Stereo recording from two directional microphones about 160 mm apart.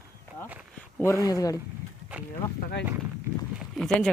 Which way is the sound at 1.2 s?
20° left (ahead or behind).